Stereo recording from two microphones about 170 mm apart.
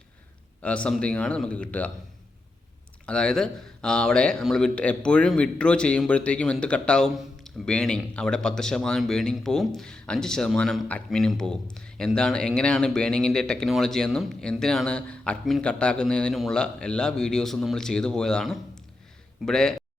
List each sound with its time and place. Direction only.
0.6 s speech: 5° left (ahead or behind)
3.1 s speech: 5° left (ahead or behind)